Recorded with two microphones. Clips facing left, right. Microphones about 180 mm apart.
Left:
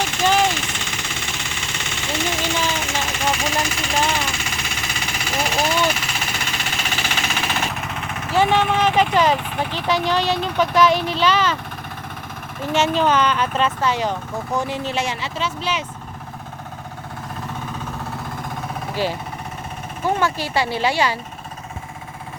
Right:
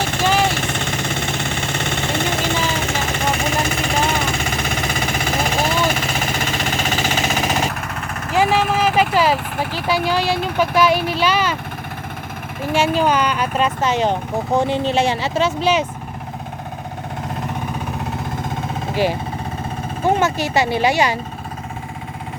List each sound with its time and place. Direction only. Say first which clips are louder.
0.0 s vehicle: right 1 dB; 55° right (ahead or behind); by 7.7 s 40° right (ahead or behind)
8.4 s speech: right 1 dB; 5° right (ahead or behind)
12.6 s speech: right 1 dB; 10° right (ahead or behind); by 15.3 s 30° right (ahead or behind)
15.4 s speech: right 9 dB; 45° right (ahead or behind)
18.4 s vehicle: right 4 dB; 20° right (ahead or behind)
20.1 s speech: right 3 dB; 20° right (ahead or behind)